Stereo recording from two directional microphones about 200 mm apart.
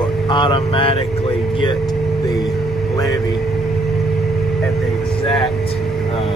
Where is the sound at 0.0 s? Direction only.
25° left (ahead or behind).